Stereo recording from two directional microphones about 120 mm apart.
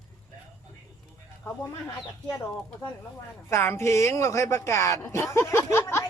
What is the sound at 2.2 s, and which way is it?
Speech, 15° left (ahead or behind).